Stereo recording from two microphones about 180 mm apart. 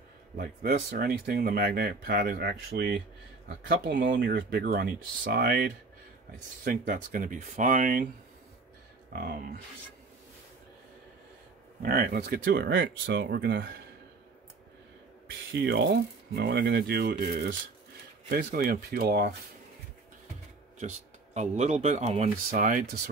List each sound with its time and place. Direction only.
0.4 s speech: 55° right (ahead or behind)
3.4 s speech: 80° right
4.4 s speech: 60° right (ahead or behind)
9.1 s speech: 55° right (ahead or behind)
11.8 s speech: 55° right (ahead or behind)
15.6 s speech: 65° right (ahead or behind)
20.8 s speech: 40° right (ahead or behind)